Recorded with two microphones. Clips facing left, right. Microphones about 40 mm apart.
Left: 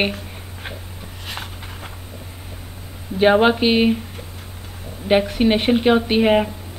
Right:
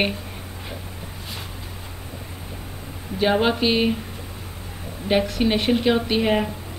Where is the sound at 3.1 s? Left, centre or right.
Left.